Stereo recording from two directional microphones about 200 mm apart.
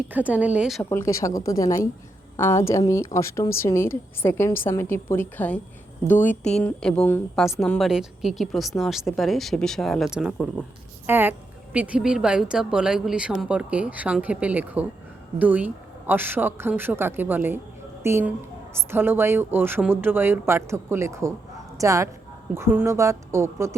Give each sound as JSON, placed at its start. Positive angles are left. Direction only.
{"t": 0.1, "sound": "a woman's voice", "side_deg": -5}
{"t": 0.9, "sound": "a woman's voice", "side_deg": 15}